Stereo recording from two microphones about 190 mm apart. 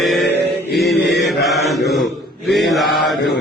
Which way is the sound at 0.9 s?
60° left (ahead or behind).